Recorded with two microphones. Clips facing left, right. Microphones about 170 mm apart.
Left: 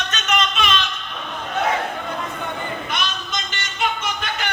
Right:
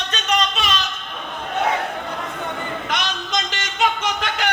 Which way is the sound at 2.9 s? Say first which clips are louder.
Right 2 dB; 90° right.